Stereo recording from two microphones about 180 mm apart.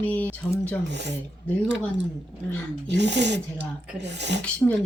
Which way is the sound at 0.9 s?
75° right (ahead or behind).